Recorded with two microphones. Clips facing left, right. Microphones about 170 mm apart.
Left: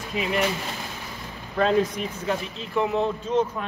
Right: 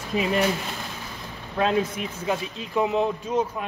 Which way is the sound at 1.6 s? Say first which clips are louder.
Left 2 dB; 5° right (ahead or behind).